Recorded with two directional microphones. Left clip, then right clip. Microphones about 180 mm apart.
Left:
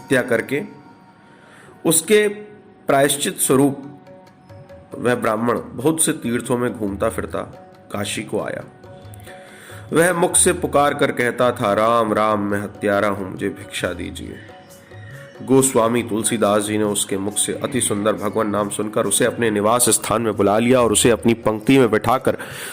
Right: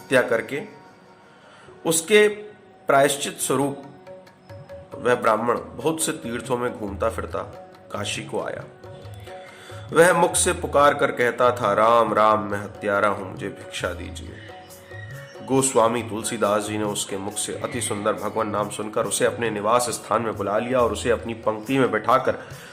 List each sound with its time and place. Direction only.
0.1 s speech: 15° left (ahead or behind)
1.8 s speech: 15° left (ahead or behind)
5.0 s speech: 15° left (ahead or behind)
9.9 s speech: 15° left (ahead or behind)
15.4 s speech: 15° left (ahead or behind)
19.6 s a man's voice: 45° left (ahead or behind); by 22.4 s 65° left (ahead or behind)